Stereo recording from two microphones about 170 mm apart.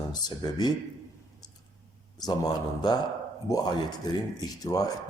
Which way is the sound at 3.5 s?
25° left (ahead or behind).